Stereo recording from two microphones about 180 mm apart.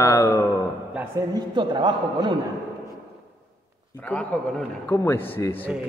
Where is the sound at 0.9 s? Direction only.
20° right (ahead or behind).